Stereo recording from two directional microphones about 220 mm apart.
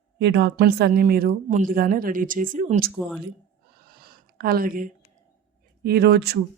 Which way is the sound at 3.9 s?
45° right (ahead or behind).